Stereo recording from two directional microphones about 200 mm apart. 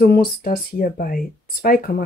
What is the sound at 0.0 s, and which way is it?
Speech, 50° left (ahead or behind).